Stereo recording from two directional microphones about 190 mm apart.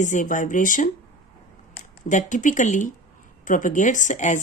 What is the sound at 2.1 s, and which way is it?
Speech, 40° left (ahead or behind).